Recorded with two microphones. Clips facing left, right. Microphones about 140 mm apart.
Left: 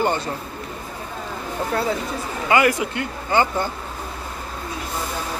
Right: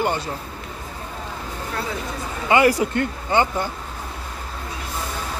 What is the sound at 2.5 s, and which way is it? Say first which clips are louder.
Speech: right 2 dB; 35° right (ahead or behind).